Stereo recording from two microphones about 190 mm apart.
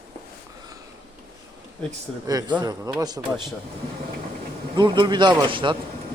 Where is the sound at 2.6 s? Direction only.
20° right (ahead or behind).